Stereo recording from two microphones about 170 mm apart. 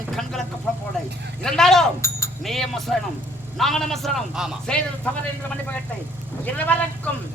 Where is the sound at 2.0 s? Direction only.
15° left (ahead or behind).